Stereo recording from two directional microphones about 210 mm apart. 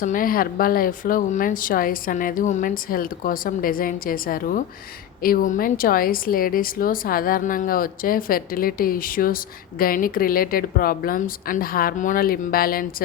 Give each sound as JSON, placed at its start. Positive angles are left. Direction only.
{"t": 0.0, "sound": "speech", "side_deg": 40}